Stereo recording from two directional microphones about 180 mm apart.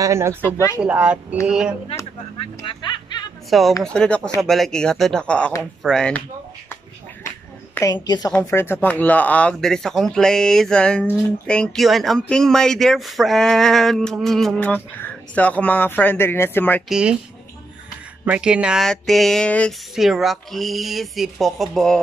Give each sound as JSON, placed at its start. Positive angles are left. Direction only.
{"t": 0.0, "sound": "speech", "side_deg": -15}
{"t": 3.4, "sound": "speech", "side_deg": 0}
{"t": 7.7, "sound": "a woman's voice", "side_deg": 20}
{"t": 16.9, "sound": "speech", "side_deg": -5}
{"t": 18.2, "sound": "speech", "side_deg": -5}